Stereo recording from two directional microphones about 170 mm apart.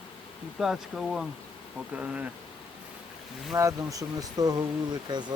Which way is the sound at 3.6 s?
20° right (ahead or behind).